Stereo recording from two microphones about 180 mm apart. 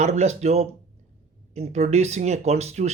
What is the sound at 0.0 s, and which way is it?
Speech, 40° right (ahead or behind).